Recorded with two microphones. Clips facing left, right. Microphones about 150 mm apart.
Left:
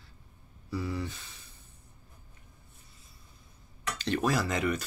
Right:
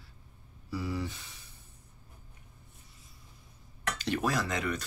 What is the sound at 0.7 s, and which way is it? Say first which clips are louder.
Owl: left 1 dB; 10° right (ahead or behind).